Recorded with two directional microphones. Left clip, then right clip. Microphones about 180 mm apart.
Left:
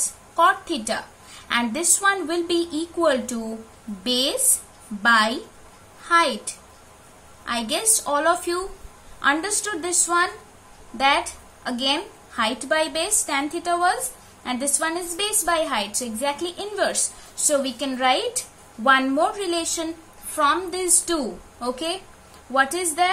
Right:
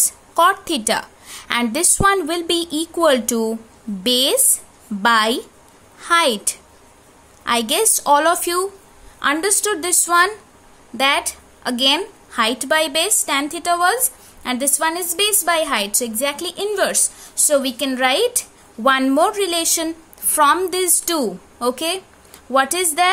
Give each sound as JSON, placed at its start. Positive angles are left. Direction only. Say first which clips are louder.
{"t": 0.3, "sound": "a woman's voice", "louder": "right 3 dB", "side_deg": -60}